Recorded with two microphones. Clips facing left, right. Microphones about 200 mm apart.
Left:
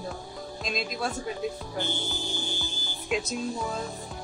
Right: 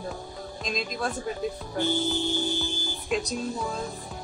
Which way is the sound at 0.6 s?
5° left (ahead or behind).